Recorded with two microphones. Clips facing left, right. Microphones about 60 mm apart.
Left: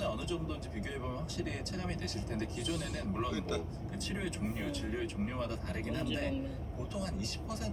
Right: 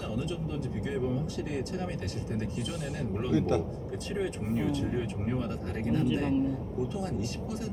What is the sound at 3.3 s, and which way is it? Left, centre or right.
Speech, right.